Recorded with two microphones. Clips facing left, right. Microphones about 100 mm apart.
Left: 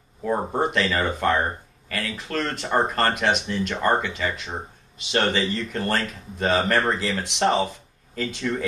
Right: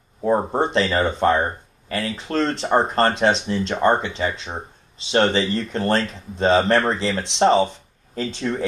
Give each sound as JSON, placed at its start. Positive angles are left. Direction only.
{"t": 0.5, "sound": "speech", "side_deg": -30}